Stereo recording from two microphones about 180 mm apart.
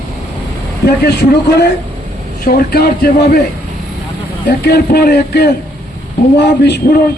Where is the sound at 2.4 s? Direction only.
55° left (ahead or behind).